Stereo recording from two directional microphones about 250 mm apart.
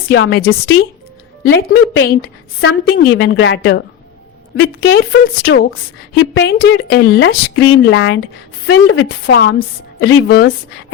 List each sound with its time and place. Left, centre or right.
0.1 s a woman's voice: left
1.5 s a woman's voice: left
4.9 s a woman's voice: left